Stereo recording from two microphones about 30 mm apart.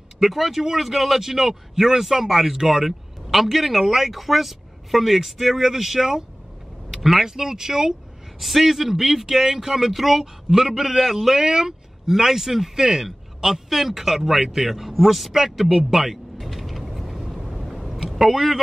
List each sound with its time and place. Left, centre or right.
0.2 s speech: centre
6.9 s vehicle: centre
7.2 s speech: centre
8.4 s speech: centre
9.8 s a man's voice: centre
15.8 s mechanisms: centre
17.3 s vehicle: centre